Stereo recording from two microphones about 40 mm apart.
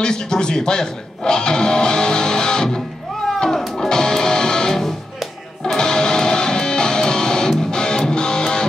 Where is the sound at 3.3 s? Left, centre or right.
Centre.